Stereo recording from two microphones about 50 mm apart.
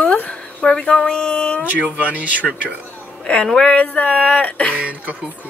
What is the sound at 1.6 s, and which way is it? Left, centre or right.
Speech, right.